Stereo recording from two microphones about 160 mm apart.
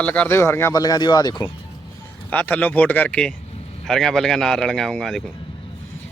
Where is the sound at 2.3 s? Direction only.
10° left (ahead or behind).